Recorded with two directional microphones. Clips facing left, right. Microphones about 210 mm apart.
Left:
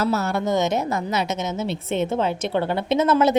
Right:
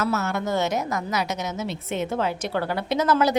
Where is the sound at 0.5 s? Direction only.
20° left (ahead or behind).